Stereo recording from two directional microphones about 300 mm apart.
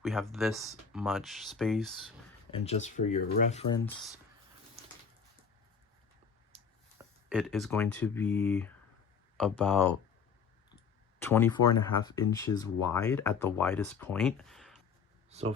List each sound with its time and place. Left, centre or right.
0.0 s speech: centre
2.5 s speech: left
6.5 s a sound: centre
7.0 s speech: centre
11.2 s speech: centre
15.3 s speech: right